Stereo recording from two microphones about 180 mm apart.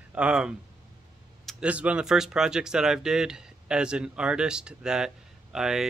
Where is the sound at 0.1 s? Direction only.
5° right (ahead or behind).